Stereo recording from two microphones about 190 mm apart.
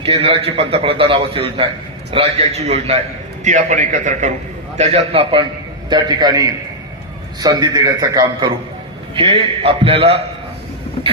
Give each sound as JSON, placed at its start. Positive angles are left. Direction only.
{"t": 0.0, "sound": "a man's voice", "side_deg": -30}